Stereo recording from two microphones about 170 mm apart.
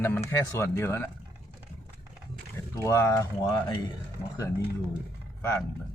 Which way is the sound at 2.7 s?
20° left (ahead or behind).